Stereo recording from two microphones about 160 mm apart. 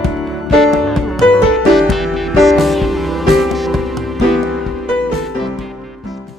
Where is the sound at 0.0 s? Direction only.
Centre (ahead or behind).